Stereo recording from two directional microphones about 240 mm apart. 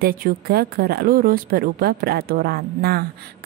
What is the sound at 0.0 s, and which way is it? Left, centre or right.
A woman's voice, right.